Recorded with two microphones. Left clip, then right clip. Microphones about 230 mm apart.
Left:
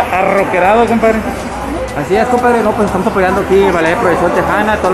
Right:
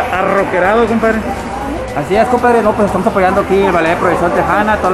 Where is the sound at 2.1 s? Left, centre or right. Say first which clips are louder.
Even; centre.